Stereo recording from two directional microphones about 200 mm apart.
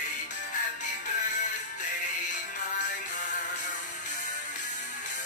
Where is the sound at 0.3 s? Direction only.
40° left (ahead or behind).